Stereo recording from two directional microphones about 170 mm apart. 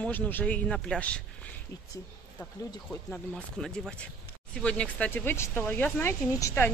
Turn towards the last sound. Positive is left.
turn(degrees=15)  # may be behind; listen again after turning